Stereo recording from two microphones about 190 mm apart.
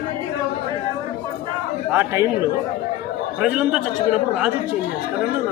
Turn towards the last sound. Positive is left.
turn(degrees=-5)  # may be behind; listen again after turning